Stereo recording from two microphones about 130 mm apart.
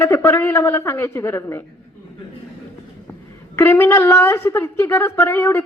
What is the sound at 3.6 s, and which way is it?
A woman's voice, 15° left (ahead or behind).